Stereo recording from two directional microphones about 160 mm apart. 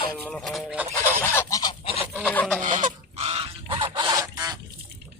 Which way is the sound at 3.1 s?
40° right (ahead or behind).